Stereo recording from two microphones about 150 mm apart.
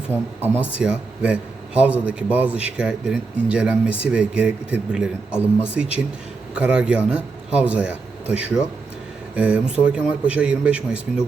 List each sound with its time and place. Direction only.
0.1 s a man's voice: 15° right (ahead or behind)